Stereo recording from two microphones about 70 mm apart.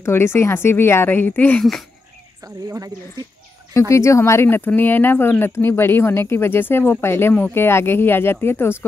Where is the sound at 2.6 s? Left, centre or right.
Right.